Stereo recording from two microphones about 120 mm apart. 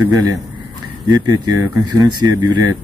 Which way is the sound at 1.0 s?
35° right (ahead or behind).